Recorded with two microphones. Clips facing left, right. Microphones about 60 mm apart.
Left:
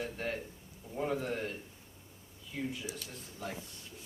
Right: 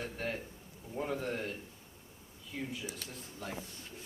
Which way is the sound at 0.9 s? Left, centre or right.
Centre.